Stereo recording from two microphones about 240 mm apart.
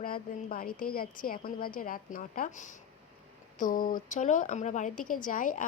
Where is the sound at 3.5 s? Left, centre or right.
Left.